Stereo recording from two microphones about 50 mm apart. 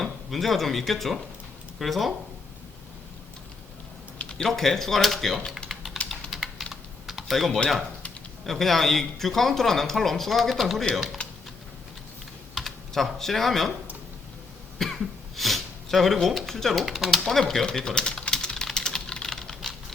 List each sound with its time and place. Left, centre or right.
0.0 s speech: centre
4.2 s a sound: centre
4.4 s speech: centre
5.6 s typing: centre
8.4 s speech: centre
12.5 s speech: centre
14.8 s speech: centre
17.7 s typing: centre